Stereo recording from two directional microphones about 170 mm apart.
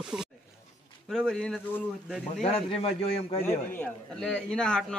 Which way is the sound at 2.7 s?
35° left (ahead or behind).